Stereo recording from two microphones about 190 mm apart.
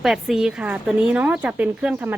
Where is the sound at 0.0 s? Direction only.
Centre (ahead or behind).